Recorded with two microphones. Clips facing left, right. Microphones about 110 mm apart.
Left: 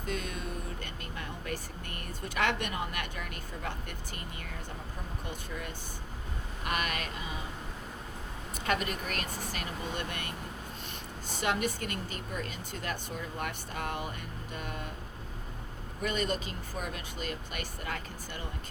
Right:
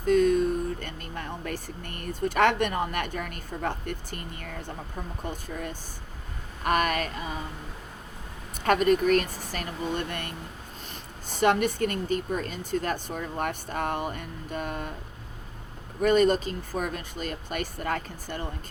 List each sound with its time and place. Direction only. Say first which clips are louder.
0.0 s speech: right 16 dB; 45° right (ahead or behind)
5.3 s a woman's voice: right 5 dB; 45° right (ahead or behind)
8.6 s a woman's voice: right 11 dB; 45° right (ahead or behind)
9.2 s speech: right 1 dB; 50° left (ahead or behind)
9.5 s a woman's voice: right 6 dB; 45° right (ahead or behind)
16.0 s a woman's voice: right 11 dB; 45° right (ahead or behind)